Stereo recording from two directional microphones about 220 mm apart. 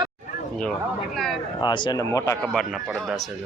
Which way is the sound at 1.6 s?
20° left (ahead or behind).